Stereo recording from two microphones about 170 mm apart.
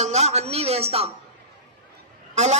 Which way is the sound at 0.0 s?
40° right (ahead or behind).